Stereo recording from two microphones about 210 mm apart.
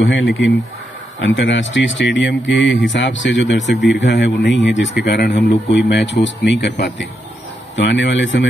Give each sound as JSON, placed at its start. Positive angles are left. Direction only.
{"t": 0.1, "sound": "a man's voice", "side_deg": 65}